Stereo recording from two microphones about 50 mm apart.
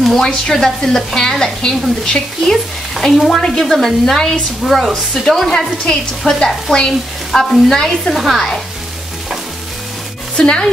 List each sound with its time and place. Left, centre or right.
0.2 s speech: centre
4.6 s speech: centre
6.9 s speech: centre
8.1 s speech: centre
10.3 s speech: centre